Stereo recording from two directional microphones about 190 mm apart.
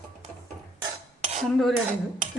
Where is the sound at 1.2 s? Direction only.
35° right (ahead or behind).